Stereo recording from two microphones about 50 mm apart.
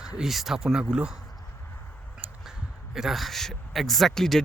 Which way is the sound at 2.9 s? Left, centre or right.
Centre.